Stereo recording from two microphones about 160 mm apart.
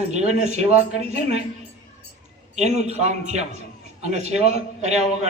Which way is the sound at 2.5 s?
45° right (ahead or behind).